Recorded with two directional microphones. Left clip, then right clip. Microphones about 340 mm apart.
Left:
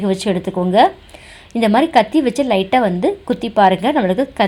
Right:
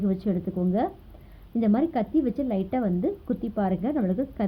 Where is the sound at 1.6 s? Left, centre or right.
Centre.